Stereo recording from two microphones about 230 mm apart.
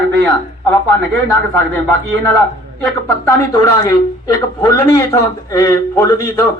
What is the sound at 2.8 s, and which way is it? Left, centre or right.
A man's voice, centre.